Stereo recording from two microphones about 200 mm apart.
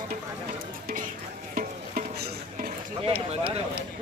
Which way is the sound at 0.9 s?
40° right (ahead or behind).